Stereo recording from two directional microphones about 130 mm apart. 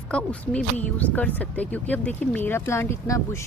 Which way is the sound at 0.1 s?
10° left (ahead or behind).